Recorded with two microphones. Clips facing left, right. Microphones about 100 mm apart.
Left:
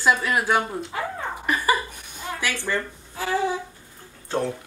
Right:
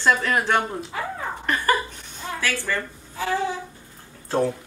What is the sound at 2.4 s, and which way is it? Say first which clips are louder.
Speech: even; 15° left (ahead or behind).